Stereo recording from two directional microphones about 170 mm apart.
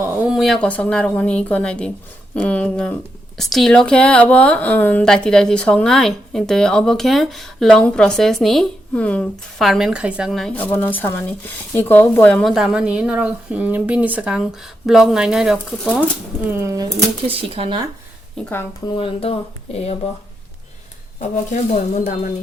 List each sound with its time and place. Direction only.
0.0 s a woman's voice: 5° right (ahead or behind)
16.6 s speech: 20° right (ahead or behind)
17.2 s speech: 35° right (ahead or behind)
18.4 s speech: 5° left (ahead or behind)
18.9 s speech: 35° left (ahead or behind)
21.9 s speech: 50° left (ahead or behind)